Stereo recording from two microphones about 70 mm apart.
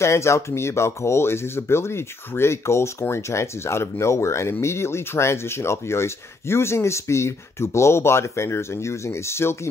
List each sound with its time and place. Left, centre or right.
0.0 s speech: left